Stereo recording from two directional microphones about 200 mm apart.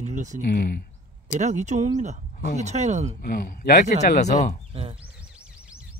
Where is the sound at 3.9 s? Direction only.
35° left (ahead or behind).